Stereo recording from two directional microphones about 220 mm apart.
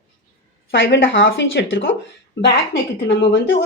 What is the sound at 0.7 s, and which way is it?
A woman's voice, 55° left (ahead or behind).